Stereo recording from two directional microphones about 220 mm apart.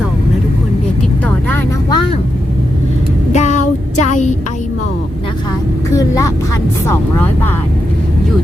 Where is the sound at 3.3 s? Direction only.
30° left (ahead or behind).